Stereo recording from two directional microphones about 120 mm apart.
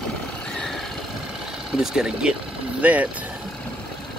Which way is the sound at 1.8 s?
5° right (ahead or behind).